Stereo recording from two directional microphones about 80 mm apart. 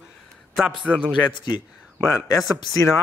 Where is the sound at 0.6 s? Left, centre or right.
Centre.